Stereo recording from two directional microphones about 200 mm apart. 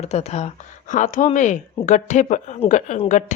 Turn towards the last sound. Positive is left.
turn(degrees=35)  # may be behind; listen again after turning